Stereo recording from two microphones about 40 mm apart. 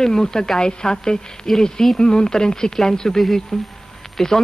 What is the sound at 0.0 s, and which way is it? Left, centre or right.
Speech, centre.